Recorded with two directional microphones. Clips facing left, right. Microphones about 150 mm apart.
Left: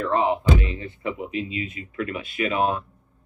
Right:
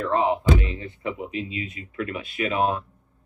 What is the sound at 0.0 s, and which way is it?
Speech, 35° right (ahead or behind).